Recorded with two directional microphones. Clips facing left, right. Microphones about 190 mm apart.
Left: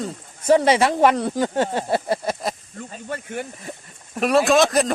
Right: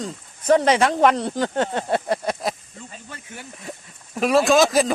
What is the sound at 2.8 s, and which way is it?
Speech, 55° left (ahead or behind).